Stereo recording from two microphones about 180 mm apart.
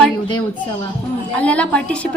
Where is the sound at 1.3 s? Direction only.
5° left (ahead or behind).